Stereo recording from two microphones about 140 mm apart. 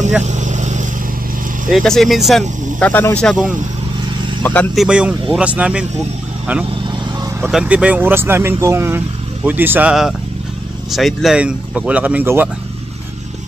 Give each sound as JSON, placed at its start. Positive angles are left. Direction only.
{"t": 0.2, "sound": "vehicle", "side_deg": -55}
{"t": 1.7, "sound": "speech", "side_deg": 0}
{"t": 2.8, "sound": "speech", "side_deg": 15}
{"t": 4.7, "sound": "speech", "side_deg": -10}
{"t": 7.4, "sound": "speech", "side_deg": -10}
{"t": 10.9, "sound": "speech", "side_deg": 0}